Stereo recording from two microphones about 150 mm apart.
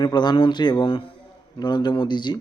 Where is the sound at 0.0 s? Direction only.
30° left (ahead or behind).